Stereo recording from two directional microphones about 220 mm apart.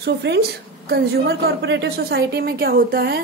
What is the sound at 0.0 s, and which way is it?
Speech, 50° right (ahead or behind).